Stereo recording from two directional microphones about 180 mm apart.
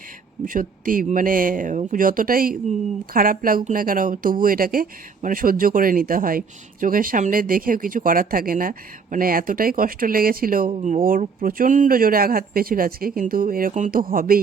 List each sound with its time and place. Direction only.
0.4 s speech: 50° right (ahead or behind)